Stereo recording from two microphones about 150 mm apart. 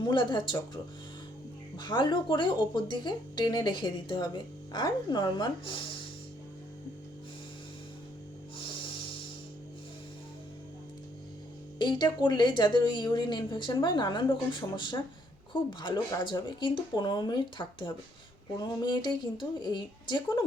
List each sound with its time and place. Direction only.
0.1 s speech: 30° left (ahead or behind)
11.8 s a woman's voice: 30° left (ahead or behind)